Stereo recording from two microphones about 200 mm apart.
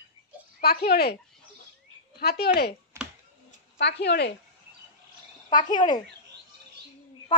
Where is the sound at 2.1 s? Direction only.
55° left (ahead or behind).